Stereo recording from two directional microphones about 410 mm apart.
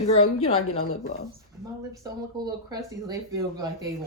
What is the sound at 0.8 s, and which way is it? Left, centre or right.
Speech, left.